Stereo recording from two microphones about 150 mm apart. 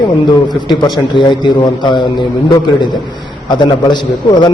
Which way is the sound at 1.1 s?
30° left (ahead or behind).